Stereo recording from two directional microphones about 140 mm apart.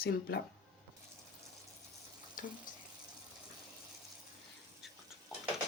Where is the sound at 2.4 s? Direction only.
75° left (ahead or behind).